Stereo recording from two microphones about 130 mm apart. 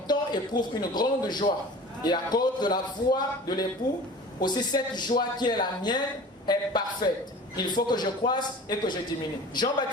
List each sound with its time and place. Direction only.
0.1 s a man's voice: 35° left (ahead or behind)